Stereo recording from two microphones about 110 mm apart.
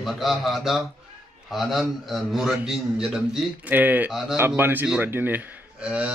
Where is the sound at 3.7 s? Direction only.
15° right (ahead or behind).